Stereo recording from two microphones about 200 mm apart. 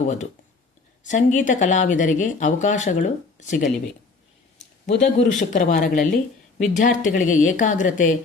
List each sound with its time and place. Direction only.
0.0 s speech: 35° left (ahead or behind)
4.9 s speech: 40° left (ahead or behind)